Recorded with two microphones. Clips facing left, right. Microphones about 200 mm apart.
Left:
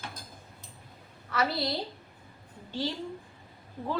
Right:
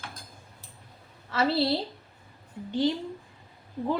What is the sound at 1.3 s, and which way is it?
A woman's voice, 25° right (ahead or behind).